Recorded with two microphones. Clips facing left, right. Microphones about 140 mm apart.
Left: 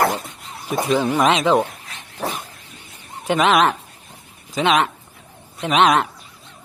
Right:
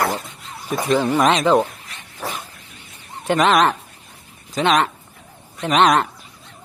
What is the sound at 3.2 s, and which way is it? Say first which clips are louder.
Speech: even; centre (ahead or behind).